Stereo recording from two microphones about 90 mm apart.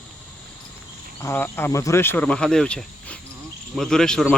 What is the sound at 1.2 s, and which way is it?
Speech, 30° left (ahead or behind).